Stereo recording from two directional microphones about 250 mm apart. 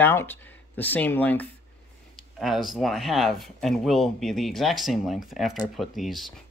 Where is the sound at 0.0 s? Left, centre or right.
Centre.